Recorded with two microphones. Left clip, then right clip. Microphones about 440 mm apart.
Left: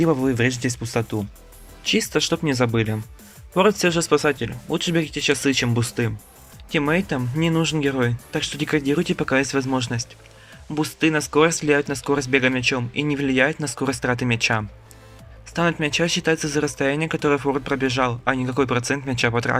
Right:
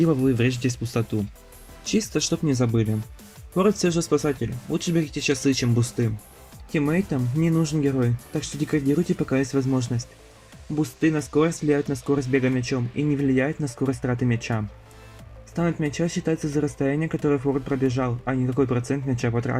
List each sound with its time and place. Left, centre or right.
0.3 s speech: centre